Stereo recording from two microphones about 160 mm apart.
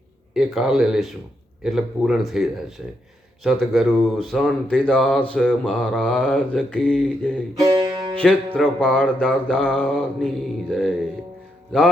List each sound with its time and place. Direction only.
0.3 s speech: 5° right (ahead or behind)
7.6 s music: 25° right (ahead or behind)
8.1 s speech: 10° left (ahead or behind)